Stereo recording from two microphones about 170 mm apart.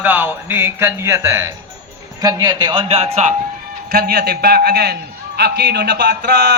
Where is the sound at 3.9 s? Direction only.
65° right (ahead or behind).